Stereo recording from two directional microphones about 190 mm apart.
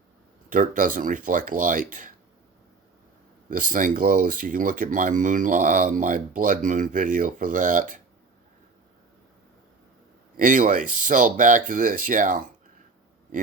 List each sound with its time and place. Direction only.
0.5 s speech: 45° right (ahead or behind)
3.5 s speech: 45° right (ahead or behind)
10.3 s speech: 45° right (ahead or behind)